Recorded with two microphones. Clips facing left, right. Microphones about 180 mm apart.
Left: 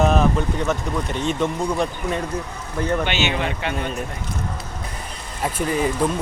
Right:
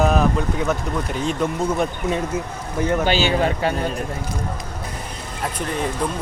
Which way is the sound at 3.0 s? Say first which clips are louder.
Right 4 dB; 35° right (ahead or behind).